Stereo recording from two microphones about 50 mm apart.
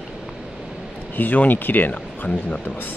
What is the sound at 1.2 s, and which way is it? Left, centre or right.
Speech, left.